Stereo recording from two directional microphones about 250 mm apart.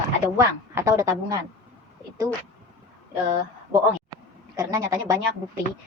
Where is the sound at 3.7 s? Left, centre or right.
Centre.